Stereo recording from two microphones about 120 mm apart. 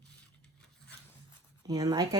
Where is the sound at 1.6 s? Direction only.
30° right (ahead or behind).